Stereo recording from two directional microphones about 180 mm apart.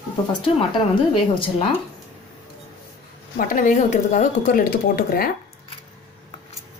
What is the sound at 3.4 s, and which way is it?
Speech, 45° left (ahead or behind).